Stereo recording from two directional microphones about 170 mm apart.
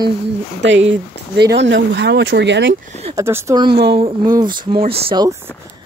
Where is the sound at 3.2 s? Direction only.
15° right (ahead or behind).